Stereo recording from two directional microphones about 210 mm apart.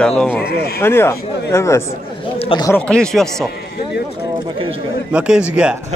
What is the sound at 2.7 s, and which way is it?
Speech, 5° left (ahead or behind).